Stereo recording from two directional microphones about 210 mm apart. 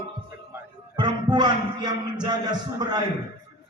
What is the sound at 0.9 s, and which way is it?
Music, 20° right (ahead or behind).